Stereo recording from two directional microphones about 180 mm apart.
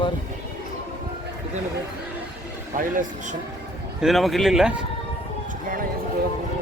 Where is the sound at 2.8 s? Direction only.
50° right (ahead or behind).